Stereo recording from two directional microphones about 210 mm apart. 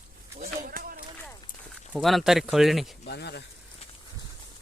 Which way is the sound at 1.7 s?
Centre (ahead or behind).